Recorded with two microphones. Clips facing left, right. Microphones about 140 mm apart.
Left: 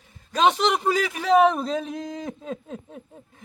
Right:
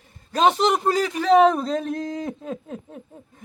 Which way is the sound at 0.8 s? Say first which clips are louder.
Right 2 dB; centre (ahead or behind).